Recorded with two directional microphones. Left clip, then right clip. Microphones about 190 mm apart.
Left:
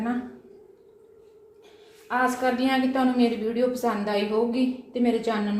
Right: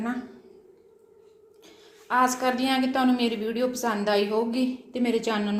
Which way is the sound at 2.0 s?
45° right (ahead or behind).